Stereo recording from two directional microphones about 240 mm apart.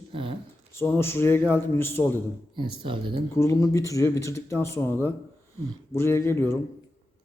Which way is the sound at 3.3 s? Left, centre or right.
Centre.